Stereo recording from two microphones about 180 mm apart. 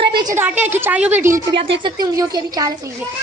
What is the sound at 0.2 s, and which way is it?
A woman's voice, 20° right (ahead or behind).